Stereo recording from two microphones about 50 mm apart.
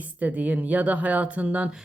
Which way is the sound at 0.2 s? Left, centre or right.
Right.